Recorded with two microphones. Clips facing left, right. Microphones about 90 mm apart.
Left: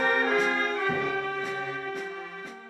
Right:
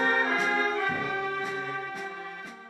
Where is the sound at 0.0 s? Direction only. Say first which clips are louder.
Left 2 dB; 15° right (ahead or behind).